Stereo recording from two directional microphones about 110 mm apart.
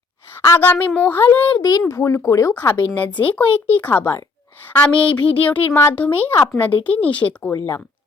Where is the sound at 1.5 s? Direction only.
35° left (ahead or behind).